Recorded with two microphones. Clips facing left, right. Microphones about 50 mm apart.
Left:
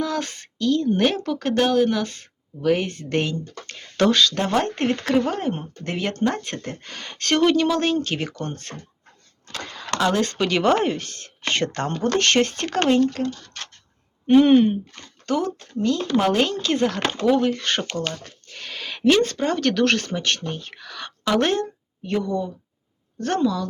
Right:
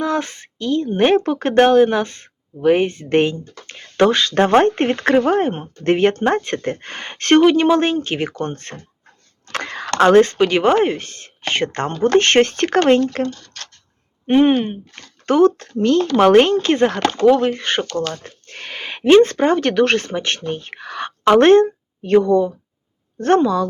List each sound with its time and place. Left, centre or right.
0.0 s speech: right
4.4 s speech: right
9.5 s a sound: right
10.0 s speech: right
10.2 s speech: right
12.1 s speech: right
13.3 s speech: centre
14.3 s speech: right
14.5 s speech: centre
15.3 s speech: right
17.0 s speech: centre
17.6 s speech: centre
17.9 s speech: centre
18.4 s speech: right